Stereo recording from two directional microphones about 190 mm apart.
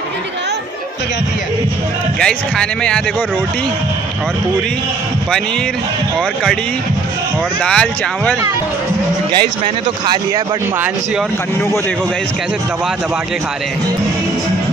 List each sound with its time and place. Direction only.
2.1 s speech: 5° left (ahead or behind)
7.6 s speech: 5° left (ahead or behind)
10.0 s speech: 15° right (ahead or behind)